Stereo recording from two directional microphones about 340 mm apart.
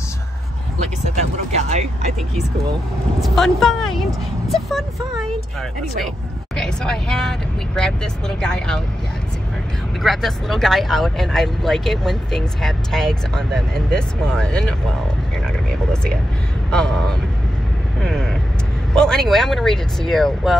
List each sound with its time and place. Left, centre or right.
1.6 s vehicle: centre
3.2 s speech: centre
10.0 s speech: centre
15.4 s vehicle: centre
16.7 s speech: centre
18.0 s vehicle: centre
18.9 s speech: centre